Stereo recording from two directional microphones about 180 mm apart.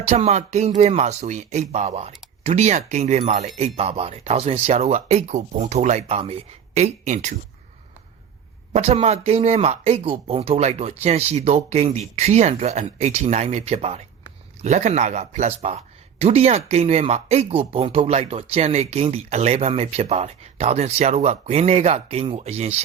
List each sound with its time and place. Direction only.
0.1 s speech: 40° right (ahead or behind)
8.7 s speech: 35° right (ahead or behind)